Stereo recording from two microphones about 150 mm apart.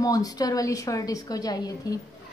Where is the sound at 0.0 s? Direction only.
25° left (ahead or behind).